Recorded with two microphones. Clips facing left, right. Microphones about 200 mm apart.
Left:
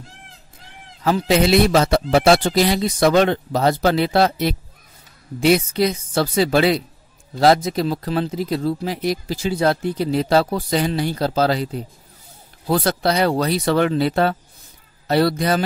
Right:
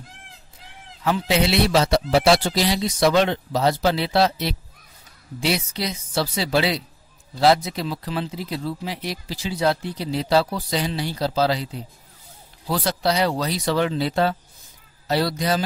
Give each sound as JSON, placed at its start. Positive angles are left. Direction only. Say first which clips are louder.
{"t": 1.0, "sound": "speech", "louder": "left 4 dB", "side_deg": 40}